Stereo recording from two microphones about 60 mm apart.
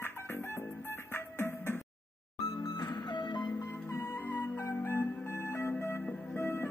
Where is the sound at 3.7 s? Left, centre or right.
Left.